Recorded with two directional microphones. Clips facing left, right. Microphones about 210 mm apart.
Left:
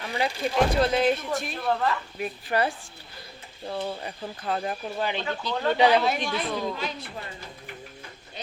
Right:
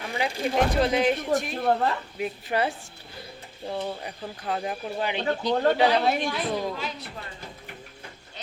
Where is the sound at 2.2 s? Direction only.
20° right (ahead or behind).